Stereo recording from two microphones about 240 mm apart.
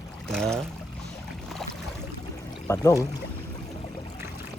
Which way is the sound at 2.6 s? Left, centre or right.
Centre.